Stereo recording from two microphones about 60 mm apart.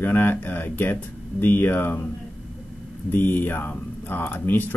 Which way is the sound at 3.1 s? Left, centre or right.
Left.